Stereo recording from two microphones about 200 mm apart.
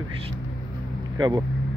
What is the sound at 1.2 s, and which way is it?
Speech, 20° right (ahead or behind).